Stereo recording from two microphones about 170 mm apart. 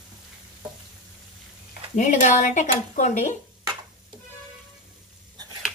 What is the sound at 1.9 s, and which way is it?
Speech, 45° left (ahead or behind).